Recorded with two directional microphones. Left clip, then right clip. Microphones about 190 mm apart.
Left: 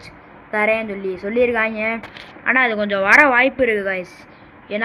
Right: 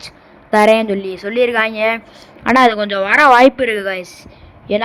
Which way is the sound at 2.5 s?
90° right.